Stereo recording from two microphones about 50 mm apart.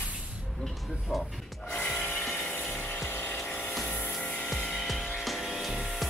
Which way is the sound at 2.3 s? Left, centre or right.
Left.